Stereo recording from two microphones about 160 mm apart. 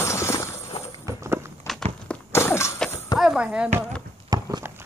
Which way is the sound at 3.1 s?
5° right (ahead or behind).